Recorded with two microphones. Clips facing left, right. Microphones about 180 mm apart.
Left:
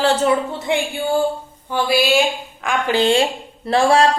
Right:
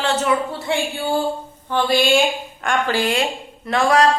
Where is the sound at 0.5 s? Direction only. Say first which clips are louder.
Left 2 dB; 20° left (ahead or behind); by 2.8 s centre (ahead or behind).